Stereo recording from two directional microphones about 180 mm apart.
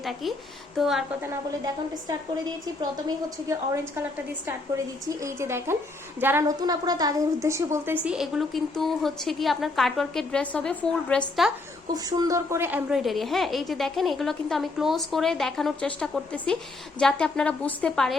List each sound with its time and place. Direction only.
0.0 s a woman's voice: centre (ahead or behind)
3.2 s a woman's voice: 15° right (ahead or behind)
5.0 s a woman's voice: 15° right (ahead or behind)
6.6 s a woman's voice: 20° right (ahead or behind)
8.0 s a woman's voice: 5° right (ahead or behind)
11.9 s a woman's voice: 20° right (ahead or behind); by 18.2 s centre (ahead or behind)